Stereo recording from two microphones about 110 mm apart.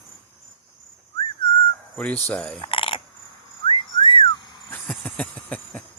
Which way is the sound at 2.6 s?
50° left (ahead or behind).